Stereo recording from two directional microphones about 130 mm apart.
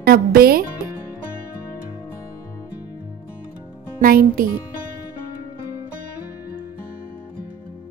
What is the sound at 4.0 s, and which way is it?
Speech, 90° right.